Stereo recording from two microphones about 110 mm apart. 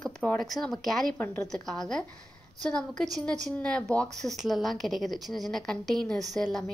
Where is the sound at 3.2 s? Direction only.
10° left (ahead or behind).